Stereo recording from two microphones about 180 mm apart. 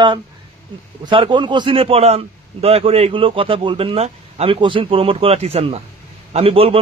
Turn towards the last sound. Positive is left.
turn(degrees=-30)  # may be behind; listen again after turning